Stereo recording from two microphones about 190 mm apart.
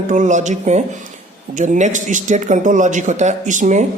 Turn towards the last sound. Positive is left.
turn(degrees=-40)  # may be behind; listen again after turning